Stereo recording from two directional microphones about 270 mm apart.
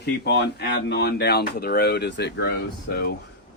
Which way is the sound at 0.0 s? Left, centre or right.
Left.